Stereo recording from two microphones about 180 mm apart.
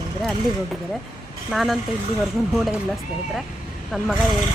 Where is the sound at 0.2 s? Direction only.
Centre (ahead or behind).